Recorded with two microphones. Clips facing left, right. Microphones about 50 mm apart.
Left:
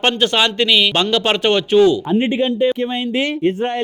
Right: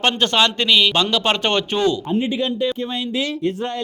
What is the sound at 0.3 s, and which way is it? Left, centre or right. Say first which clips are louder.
A man's voice: left 1 dB; centre.